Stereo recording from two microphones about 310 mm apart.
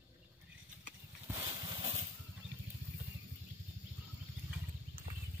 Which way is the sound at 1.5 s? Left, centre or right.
Centre.